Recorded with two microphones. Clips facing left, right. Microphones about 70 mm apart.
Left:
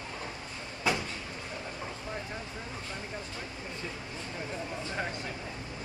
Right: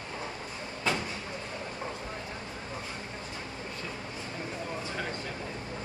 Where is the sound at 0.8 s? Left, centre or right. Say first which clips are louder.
Left 1 dB; centre.